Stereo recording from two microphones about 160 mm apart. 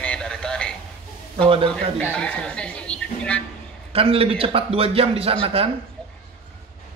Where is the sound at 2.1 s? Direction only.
5° left (ahead or behind).